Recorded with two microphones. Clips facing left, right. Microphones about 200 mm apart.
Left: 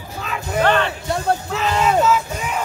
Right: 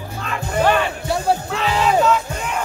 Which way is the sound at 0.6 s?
10° right (ahead or behind).